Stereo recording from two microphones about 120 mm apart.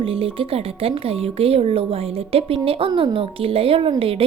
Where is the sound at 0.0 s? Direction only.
50° right (ahead or behind).